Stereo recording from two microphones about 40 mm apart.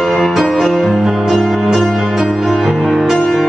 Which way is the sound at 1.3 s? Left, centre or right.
Centre.